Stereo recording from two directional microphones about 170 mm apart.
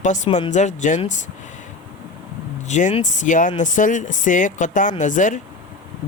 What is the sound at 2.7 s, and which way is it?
Speech, 45° left (ahead or behind).